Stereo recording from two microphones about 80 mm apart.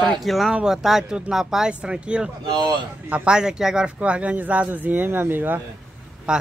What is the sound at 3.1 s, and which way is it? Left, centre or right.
Speech, centre.